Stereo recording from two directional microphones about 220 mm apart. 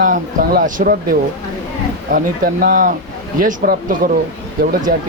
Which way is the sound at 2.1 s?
40° right (ahead or behind).